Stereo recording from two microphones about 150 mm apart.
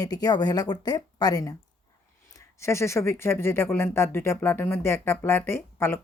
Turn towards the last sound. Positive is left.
turn(degrees=15)  # may be behind; listen again after turning